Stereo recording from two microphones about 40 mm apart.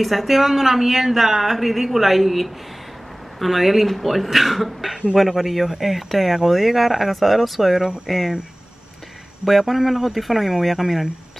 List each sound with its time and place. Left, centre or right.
0.0 s speech: centre
9.4 s speech: centre